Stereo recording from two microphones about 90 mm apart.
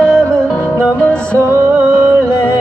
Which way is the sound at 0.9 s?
15° left (ahead or behind).